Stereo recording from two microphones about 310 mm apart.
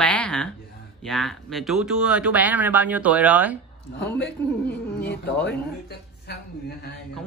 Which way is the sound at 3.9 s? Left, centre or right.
Centre.